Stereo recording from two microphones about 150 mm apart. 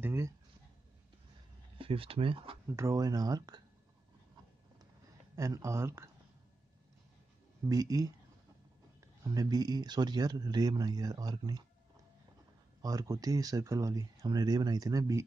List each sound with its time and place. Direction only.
0.0 s speech: 20° right (ahead or behind)
1.8 s speech: 35° right (ahead or behind)
2.7 s speech: 20° right (ahead or behind)
5.3 s speech: 20° right (ahead or behind)
7.6 s speech: 25° right (ahead or behind)
12.8 s speech: 25° right (ahead or behind)